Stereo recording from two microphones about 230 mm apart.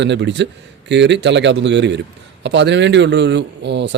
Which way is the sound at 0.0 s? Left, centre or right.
Right.